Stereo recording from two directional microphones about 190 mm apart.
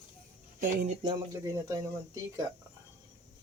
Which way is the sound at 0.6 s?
45° right (ahead or behind).